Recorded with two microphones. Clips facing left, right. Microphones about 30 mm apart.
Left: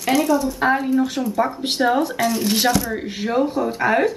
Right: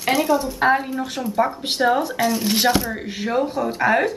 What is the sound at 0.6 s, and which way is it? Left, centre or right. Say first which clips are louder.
Speech: left 1 dB; centre.